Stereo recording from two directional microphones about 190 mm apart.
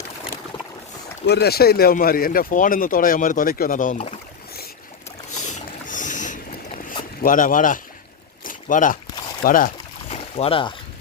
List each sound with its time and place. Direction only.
1.3 s speech: 55° left (ahead or behind); by 4.1 s 40° left (ahead or behind)
5.4 s boat: 40° left (ahead or behind)
7.2 s speech: 45° left (ahead or behind)
8.4 s a sound: 45° left (ahead or behind)
9.4 s boat: 45° left (ahead or behind)
10.2 s speech: 30° left (ahead or behind)